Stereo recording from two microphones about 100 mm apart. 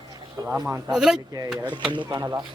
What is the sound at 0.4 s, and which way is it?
Speech, 10° right (ahead or behind).